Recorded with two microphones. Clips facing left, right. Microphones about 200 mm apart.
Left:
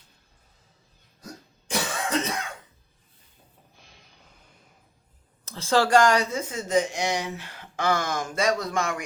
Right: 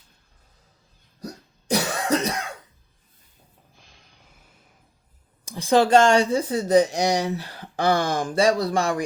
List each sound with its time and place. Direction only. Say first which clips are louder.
1.2 s cough: right 6 dB; 40° right (ahead or behind)
5.5 s speech: right 4 dB; 15° right (ahead or behind); by 9.0 s 35° right (ahead or behind)